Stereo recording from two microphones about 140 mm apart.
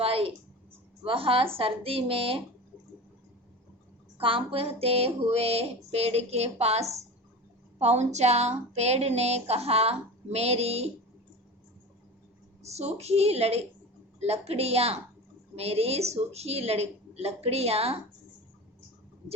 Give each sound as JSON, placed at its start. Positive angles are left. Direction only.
{"t": 0.0, "sound": "a sound", "side_deg": -40}
{"t": 1.0, "sound": "a woman's voice", "side_deg": -40}
{"t": 4.2, "sound": "a woman's voice", "side_deg": -40}
{"t": 12.6, "sound": "a woman's voice", "side_deg": -50}